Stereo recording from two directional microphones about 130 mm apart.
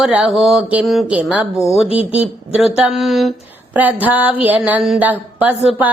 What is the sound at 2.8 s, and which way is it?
Mantra, centre (ahead or behind).